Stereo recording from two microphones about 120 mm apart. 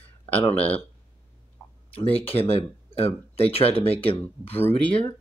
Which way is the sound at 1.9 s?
55° left (ahead or behind).